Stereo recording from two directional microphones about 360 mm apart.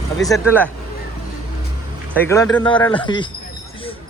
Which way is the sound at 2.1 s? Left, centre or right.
Centre.